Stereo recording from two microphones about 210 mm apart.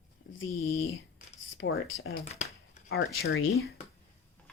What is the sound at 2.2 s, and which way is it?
Speech, 30° left (ahead or behind).